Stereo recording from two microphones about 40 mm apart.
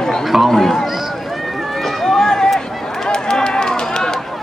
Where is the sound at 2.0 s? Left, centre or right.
Centre.